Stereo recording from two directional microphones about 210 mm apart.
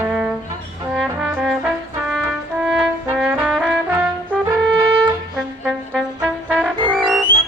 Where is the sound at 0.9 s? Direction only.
5° right (ahead or behind).